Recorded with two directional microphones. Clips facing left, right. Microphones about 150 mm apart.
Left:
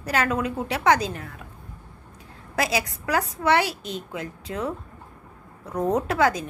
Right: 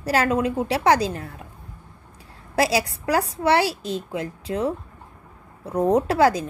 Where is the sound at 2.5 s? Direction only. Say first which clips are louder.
Right 4 dB; 35° right (ahead or behind).